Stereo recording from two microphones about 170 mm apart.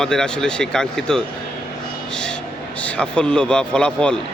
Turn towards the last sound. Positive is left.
turn(degrees=5)  # may be behind; listen again after turning